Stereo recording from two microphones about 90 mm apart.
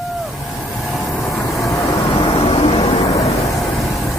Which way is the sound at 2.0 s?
70° left (ahead or behind).